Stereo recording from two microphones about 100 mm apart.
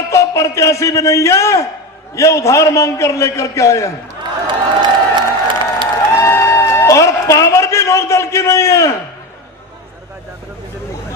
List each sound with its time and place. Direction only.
0.1 s a man's voice: 30° left (ahead or behind)
4.8 s crowd: 50° right (ahead or behind)
6.1 s music: 30° left (ahead or behind)